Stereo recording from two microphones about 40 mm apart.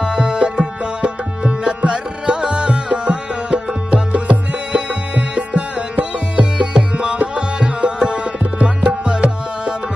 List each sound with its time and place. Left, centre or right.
0.0 s tabla: centre
7.3 s music: right
8.0 s tabla: right